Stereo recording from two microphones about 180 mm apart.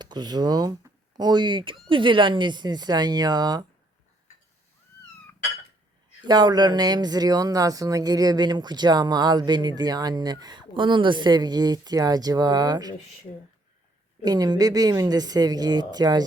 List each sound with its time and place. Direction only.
0.0 s speech: 25° right (ahead or behind)
6.2 s speech: 25° right (ahead or behind)
14.3 s speech: 20° right (ahead or behind)